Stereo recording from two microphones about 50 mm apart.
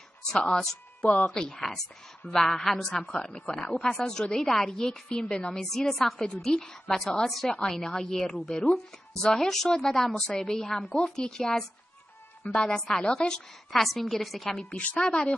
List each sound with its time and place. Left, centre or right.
0.3 s speech: centre
6.2 s speech: centre
7.2 s a woman's voice: centre
12.6 s speech: centre
13.7 s a woman's voice: centre
14.7 s a woman's voice: left
15.0 s speech: centre